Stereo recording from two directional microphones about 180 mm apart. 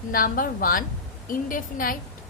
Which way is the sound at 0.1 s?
50° left (ahead or behind).